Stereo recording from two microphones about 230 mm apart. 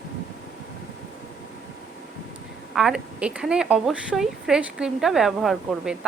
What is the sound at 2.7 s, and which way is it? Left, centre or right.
Speech, centre.